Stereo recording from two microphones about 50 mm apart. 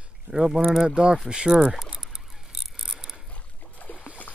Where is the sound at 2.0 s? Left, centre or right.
Centre.